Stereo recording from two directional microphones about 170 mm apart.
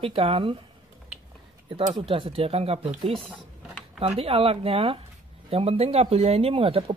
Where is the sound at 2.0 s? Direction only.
30° right (ahead or behind).